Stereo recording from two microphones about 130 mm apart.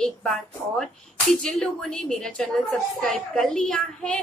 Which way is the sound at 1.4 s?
5° left (ahead or behind).